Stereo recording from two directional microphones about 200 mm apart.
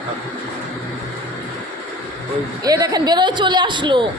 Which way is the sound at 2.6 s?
20° right (ahead or behind).